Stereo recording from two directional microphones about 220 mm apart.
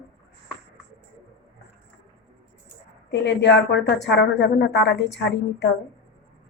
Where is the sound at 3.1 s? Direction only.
50° left (ahead or behind).